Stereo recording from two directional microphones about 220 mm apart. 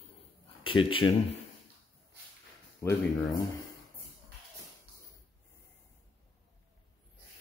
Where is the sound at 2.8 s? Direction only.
15° left (ahead or behind).